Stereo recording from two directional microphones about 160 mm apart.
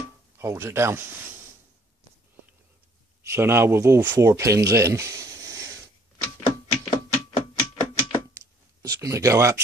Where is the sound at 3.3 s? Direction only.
15° right (ahead or behind).